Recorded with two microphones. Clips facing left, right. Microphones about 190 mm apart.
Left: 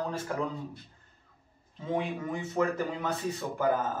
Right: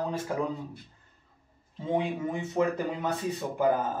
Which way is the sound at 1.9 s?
20° right (ahead or behind).